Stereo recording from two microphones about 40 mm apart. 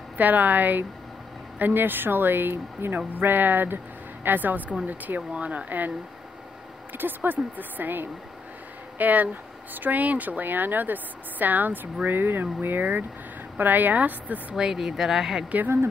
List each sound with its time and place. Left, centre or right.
0.2 s speech: right
3.2 s speech: right
14.5 s speech: centre